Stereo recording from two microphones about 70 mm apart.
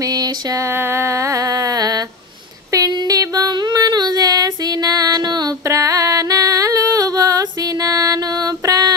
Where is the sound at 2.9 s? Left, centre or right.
Right.